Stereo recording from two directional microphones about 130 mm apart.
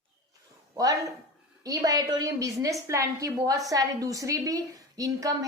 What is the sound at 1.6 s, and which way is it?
A woman's voice, 25° right (ahead or behind).